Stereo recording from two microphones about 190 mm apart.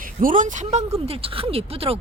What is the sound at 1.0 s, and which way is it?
Speech, 30° right (ahead or behind).